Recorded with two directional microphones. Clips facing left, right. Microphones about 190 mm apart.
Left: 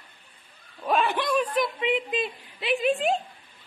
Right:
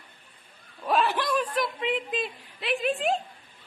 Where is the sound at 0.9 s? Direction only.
Centre (ahead or behind).